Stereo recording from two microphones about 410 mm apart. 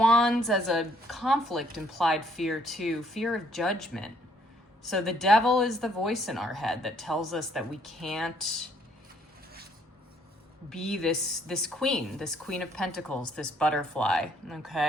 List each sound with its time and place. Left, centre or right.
0.0 s a woman's voice: centre
10.7 s a woman's voice: centre